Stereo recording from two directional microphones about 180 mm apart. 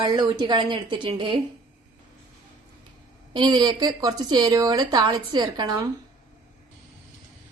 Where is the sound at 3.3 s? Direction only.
25° right (ahead or behind).